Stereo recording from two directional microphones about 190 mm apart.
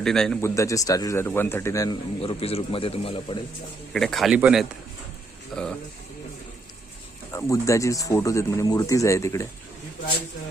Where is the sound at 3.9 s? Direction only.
Centre (ahead or behind).